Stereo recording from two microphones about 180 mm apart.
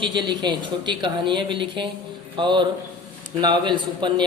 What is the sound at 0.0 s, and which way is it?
A man's voice, 25° right (ahead or behind).